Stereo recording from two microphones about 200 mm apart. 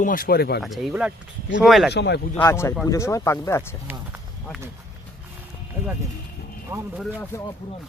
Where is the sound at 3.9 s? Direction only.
10° right (ahead or behind).